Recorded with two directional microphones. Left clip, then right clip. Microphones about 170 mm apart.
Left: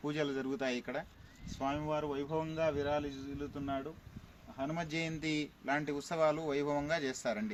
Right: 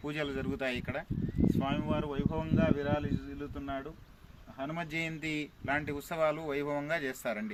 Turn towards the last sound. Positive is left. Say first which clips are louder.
# right 1 dB
turn(degrees=-15)  # may be behind; listen again after turning